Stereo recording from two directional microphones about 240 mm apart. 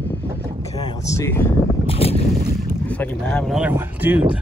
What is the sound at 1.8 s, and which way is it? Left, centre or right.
Boat, left.